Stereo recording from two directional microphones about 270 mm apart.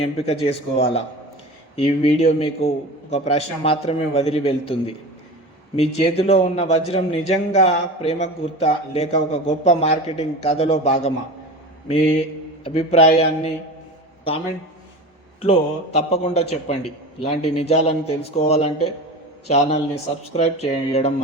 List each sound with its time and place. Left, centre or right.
0.0 s a man's voice: left
12.6 s a man's voice: left
15.4 s a man's voice: left